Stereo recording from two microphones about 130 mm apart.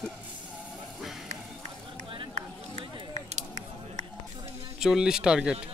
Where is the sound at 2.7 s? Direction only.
65° right (ahead or behind).